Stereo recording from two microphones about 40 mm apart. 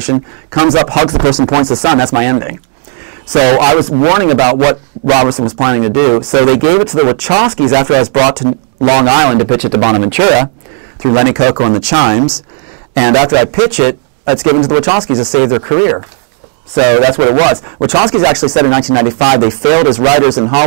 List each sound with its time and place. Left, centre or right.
0.5 s speech: centre
15.7 s speech: centre
16.7 s speech: centre